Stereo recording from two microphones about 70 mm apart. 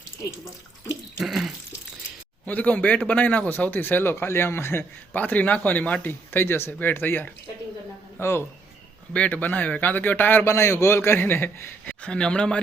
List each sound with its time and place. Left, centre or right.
1.2 s water: centre
2.5 s a man's voice: left
9.1 s speech: centre
10.5 s a man's voice: left
12.0 s speech: centre